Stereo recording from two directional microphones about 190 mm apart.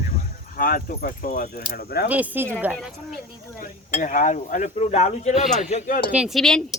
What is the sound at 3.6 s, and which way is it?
Speech, 45° left (ahead or behind).